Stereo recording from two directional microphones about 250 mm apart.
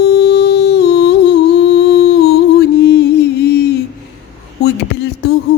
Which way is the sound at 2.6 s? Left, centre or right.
Left.